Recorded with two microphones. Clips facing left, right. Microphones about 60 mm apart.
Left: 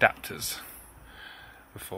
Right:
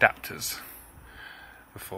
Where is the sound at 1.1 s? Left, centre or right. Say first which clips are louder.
Right 2 dB; right.